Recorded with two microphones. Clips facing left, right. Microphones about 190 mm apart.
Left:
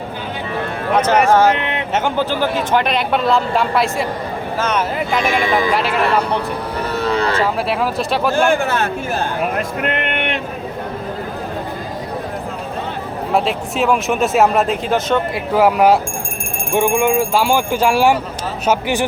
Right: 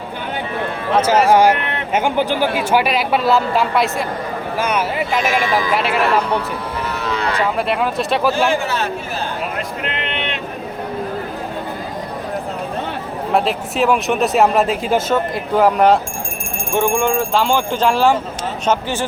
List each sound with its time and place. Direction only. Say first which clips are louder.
0.9 s speech: even; 10° right (ahead or behind)
6.9 s speech: left 5 dB; 35° left (ahead or behind)
7.7 s speech: even; centre (ahead or behind)
8.4 s speech: left 2 dB; 50° left (ahead or behind)
13.3 s speech: even; centre (ahead or behind)
15.5 s speech: even; 5° left (ahead or behind)